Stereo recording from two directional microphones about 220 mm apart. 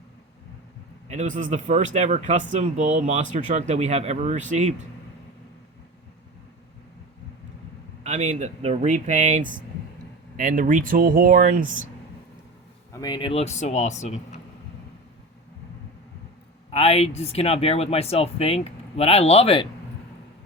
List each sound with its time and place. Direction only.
1.1 s speech: 35° right (ahead or behind)
8.0 s speech: 30° right (ahead or behind)
12.9 s speech: 15° left (ahead or behind)
16.7 s speech: 30° left (ahead or behind)